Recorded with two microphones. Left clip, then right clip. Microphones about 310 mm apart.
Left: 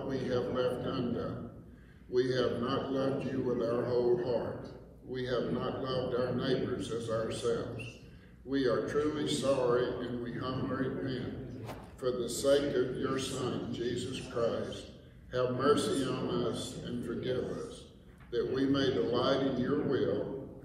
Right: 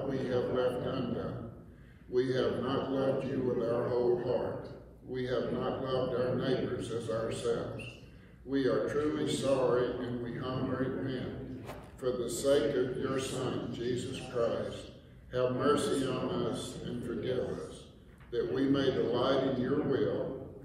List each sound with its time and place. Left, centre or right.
0.1 s a man's voice: centre
18.3 s a man's voice: centre